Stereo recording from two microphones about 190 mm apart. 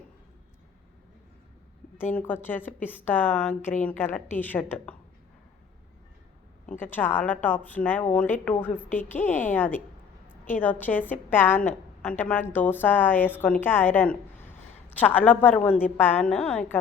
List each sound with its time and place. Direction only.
2.1 s a woman's voice: 10° left (ahead or behind)
6.9 s a woman's voice: 10° left (ahead or behind)